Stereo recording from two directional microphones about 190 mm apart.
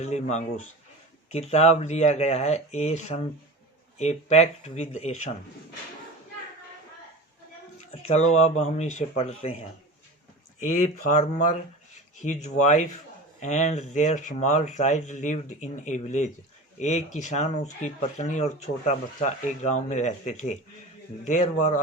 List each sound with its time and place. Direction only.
0.0 s speech: 35° left (ahead or behind)
7.9 s speech: 35° left (ahead or behind)
10.6 s a man's voice: 40° left (ahead or behind)